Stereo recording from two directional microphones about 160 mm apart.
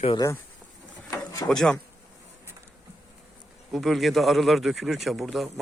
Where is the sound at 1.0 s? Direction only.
20° left (ahead or behind).